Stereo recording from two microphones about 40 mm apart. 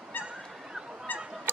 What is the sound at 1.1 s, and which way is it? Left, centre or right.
Goose, left.